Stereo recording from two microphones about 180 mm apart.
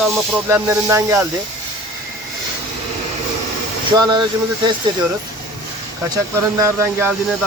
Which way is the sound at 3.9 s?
25° right (ahead or behind).